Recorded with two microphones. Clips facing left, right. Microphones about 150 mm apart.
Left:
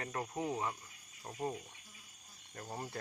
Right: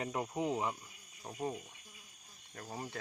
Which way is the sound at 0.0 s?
15° right (ahead or behind).